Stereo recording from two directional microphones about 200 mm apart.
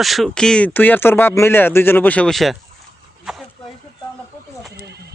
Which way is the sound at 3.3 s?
Centre (ahead or behind).